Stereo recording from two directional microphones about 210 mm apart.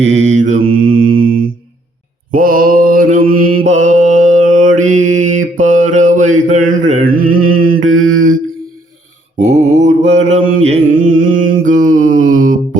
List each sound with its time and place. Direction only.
0.0 s mantra: 35° right (ahead or behind)
7.9 s mantra: 75° right (ahead or behind)
9.4 s mantra: 30° right (ahead or behind)